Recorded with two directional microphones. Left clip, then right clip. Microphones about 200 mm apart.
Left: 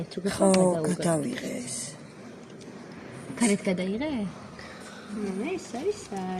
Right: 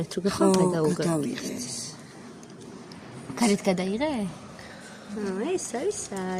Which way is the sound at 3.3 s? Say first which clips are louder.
Right 2 dB; 50° right (ahead or behind).